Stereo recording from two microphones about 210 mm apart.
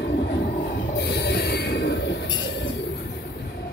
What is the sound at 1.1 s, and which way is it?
Train, 55° left (ahead or behind).